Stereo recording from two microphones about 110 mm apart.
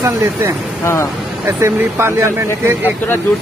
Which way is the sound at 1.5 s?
25° right (ahead or behind).